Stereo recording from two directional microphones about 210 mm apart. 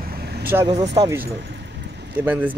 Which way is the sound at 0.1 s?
45° right (ahead or behind).